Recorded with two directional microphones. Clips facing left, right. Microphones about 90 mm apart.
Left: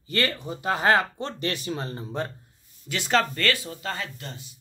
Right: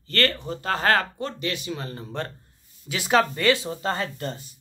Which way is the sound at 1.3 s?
40° left (ahead or behind).